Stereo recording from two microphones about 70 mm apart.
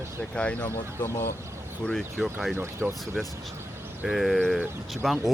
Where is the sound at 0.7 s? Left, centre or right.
Left.